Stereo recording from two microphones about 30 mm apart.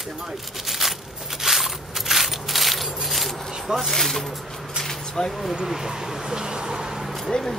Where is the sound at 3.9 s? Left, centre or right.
Centre.